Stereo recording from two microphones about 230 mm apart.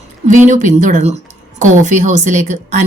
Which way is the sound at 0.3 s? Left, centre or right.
Right.